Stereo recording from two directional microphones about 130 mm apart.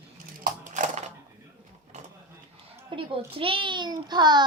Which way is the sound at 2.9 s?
40° right (ahead or behind).